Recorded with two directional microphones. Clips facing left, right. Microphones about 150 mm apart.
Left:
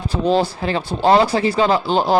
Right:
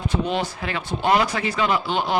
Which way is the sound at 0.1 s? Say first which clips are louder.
Left 9 dB; 35° left (ahead or behind).